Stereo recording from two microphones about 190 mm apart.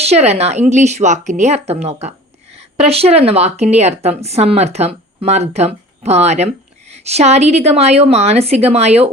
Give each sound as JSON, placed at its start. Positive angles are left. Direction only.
{"t": 0.0, "sound": "speech", "side_deg": -35}